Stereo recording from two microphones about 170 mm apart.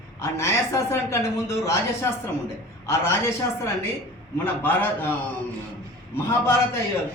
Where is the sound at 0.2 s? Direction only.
15° left (ahead or behind).